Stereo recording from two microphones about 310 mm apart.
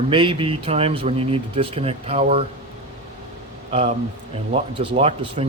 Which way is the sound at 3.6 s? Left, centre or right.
Centre.